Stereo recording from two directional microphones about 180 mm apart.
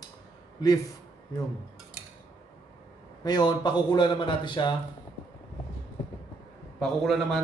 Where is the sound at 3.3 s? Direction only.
25° left (ahead or behind).